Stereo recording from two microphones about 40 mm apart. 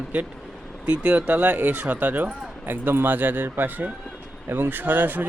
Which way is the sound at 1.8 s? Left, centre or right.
Right.